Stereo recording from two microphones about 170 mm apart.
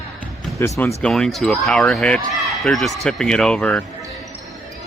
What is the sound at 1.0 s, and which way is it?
Speech, 5° left (ahead or behind).